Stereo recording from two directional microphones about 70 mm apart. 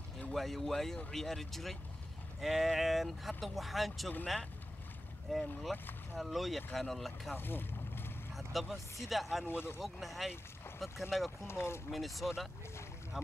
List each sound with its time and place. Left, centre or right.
0.3 s speech: centre
5.3 s speech: centre
7.3 s vehicle: left
8.4 s vehicle: centre
9.0 s speech: centre
9.5 s speech: left
9.8 s speech: centre
11.4 s speech: left
11.9 s speech: centre